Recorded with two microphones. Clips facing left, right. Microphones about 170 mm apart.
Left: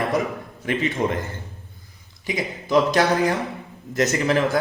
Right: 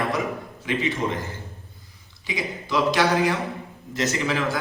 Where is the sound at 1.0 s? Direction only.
55° left (ahead or behind).